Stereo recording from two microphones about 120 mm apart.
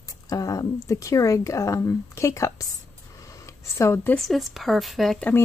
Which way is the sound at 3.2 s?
25° left (ahead or behind).